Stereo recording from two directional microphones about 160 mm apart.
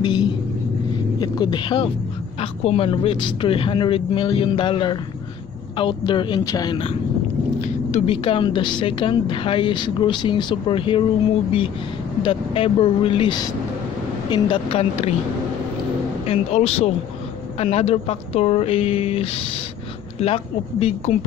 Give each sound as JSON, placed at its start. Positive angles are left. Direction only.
{"t": 0.0, "sound": "a sound", "side_deg": 30}
{"t": 1.2, "sound": "speech", "side_deg": 30}
{"t": 7.6, "sound": "speech", "side_deg": 40}
{"t": 12.2, "sound": "speech", "side_deg": 35}
{"t": 16.3, "sound": "speech", "side_deg": 40}